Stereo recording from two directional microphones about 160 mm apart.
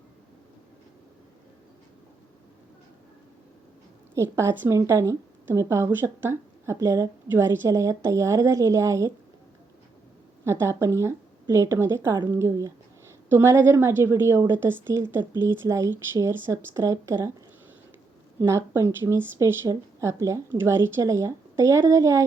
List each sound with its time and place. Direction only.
4.1 s a woman's voice: 15° right (ahead or behind)
10.4 s a woman's voice: 15° right (ahead or behind)
18.3 s a woman's voice: 15° right (ahead or behind)